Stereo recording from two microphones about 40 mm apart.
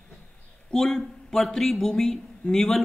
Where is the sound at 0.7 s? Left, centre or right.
Centre.